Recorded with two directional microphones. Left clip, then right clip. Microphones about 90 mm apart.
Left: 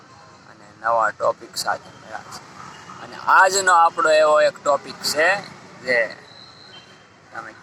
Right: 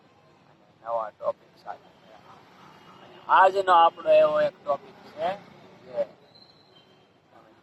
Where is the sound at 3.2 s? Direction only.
40° left (ahead or behind).